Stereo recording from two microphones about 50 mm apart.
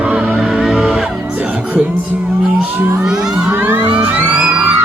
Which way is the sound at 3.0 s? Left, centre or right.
Centre.